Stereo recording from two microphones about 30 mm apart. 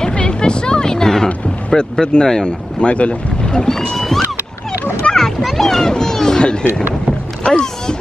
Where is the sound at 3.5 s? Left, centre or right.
Left.